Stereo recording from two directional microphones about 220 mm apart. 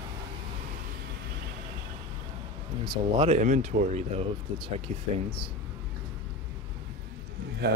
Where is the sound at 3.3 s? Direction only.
35° right (ahead or behind).